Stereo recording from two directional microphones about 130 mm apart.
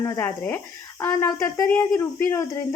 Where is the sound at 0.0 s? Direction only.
25° left (ahead or behind).